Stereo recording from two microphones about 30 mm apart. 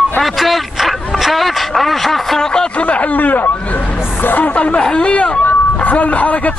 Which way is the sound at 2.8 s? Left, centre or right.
Left.